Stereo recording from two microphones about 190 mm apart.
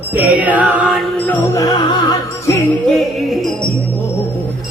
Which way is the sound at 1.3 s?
15° left (ahead or behind).